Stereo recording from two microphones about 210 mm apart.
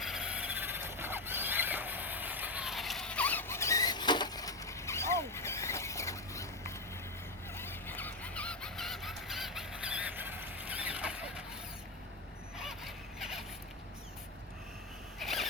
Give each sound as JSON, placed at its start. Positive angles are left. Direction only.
{"t": 0.0, "sound": "a sound", "side_deg": -5}
{"t": 12.5, "sound": "squeal", "side_deg": 0}
{"t": 15.2, "sound": "zipper", "side_deg": 0}